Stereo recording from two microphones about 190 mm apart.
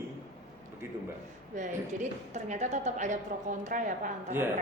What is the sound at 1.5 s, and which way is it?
A woman's voice, 40° right (ahead or behind).